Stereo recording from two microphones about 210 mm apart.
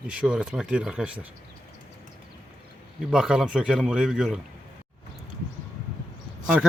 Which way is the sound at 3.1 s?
5° right (ahead or behind).